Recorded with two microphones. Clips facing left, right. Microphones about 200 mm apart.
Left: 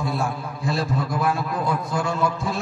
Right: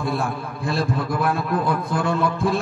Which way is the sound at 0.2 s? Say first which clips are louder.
Right 1 dB; 55° right (ahead or behind).